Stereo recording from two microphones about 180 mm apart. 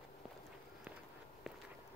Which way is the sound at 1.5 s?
Centre (ahead or behind).